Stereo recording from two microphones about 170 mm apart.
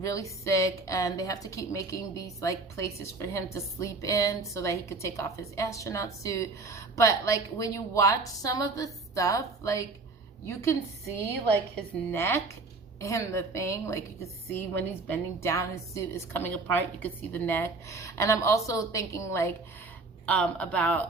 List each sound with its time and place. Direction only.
0.0 s a woman's voice: 20° left (ahead or behind)
12.1 s a woman's voice: 15° left (ahead or behind)